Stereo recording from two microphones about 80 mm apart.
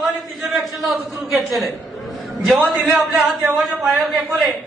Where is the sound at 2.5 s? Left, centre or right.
Centre.